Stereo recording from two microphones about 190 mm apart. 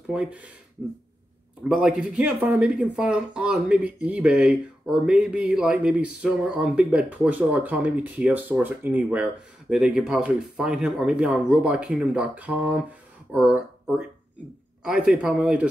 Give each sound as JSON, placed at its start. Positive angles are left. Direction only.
{"t": 0.1, "sound": "speech", "side_deg": -5}
{"t": 1.6, "sound": "speech", "side_deg": -5}
{"t": 14.8, "sound": "speech", "side_deg": -5}